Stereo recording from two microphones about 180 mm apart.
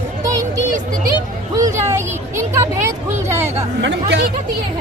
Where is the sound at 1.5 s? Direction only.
15° right (ahead or behind).